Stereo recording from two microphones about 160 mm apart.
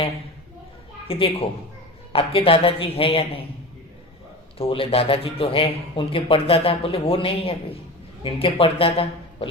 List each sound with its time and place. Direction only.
1.0 s a man's voice: 35° left (ahead or behind)
4.5 s a man's voice: 35° left (ahead or behind)